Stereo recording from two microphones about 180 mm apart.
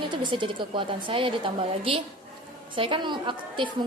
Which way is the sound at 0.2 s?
25° right (ahead or behind).